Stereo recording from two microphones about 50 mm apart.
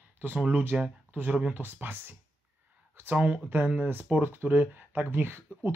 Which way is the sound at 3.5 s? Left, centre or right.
Right.